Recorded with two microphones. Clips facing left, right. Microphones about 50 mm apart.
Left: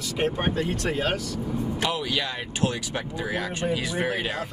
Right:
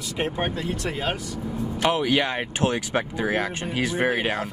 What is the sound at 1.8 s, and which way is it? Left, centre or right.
Speech, right.